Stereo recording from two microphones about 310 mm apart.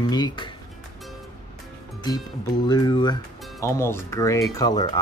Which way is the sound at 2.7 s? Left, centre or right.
Centre.